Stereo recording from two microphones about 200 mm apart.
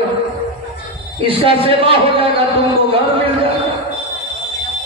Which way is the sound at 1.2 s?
25° right (ahead or behind).